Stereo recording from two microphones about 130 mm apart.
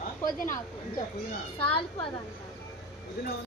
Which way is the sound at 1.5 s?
40° left (ahead or behind).